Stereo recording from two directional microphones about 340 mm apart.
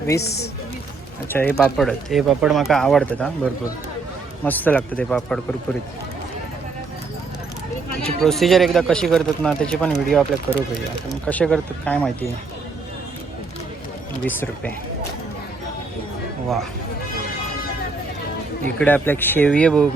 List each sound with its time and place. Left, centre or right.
0.2 s a woman's voice: left
1.3 s speech: centre
4.4 s speech: centre
8.0 s speech: centre
14.3 s speech: centre
18.8 s speech: centre